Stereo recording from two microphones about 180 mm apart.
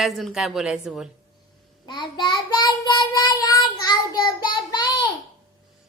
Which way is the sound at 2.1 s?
25° left (ahead or behind).